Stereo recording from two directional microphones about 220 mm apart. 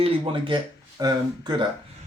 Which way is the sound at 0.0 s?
20° right (ahead or behind).